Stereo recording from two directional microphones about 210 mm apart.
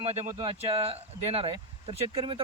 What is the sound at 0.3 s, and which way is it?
A man's voice, 25° right (ahead or behind).